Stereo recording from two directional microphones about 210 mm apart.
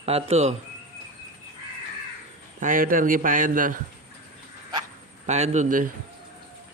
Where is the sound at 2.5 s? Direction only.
40° right (ahead or behind).